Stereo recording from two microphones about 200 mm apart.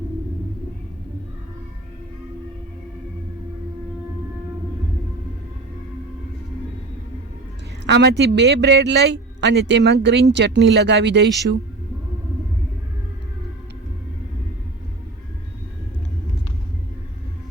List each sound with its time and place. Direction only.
7.9 s a man's voice: 55° right (ahead or behind)